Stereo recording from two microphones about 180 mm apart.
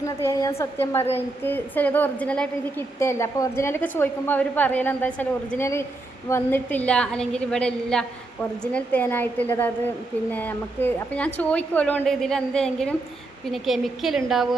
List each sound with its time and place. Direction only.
0.0 s a woman's voice: 15° left (ahead or behind); by 14.2 s centre (ahead or behind)